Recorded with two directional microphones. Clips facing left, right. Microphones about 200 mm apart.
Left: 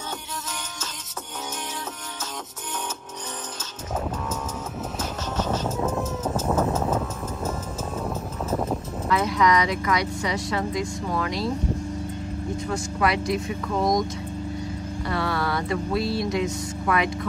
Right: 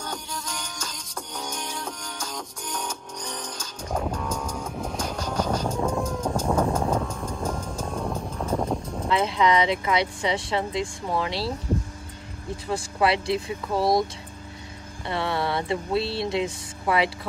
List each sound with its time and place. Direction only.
4.9 s vehicle: 5° left (ahead or behind)
9.1 s speech: 25° right (ahead or behind)
12.6 s speech: 30° right (ahead or behind)
15.0 s speech: 25° right (ahead or behind)